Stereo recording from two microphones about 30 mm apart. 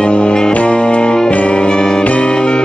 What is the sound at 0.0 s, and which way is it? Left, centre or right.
Music, left.